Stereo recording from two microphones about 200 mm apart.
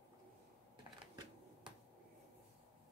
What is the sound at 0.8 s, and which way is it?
Camera, 20° right (ahead or behind).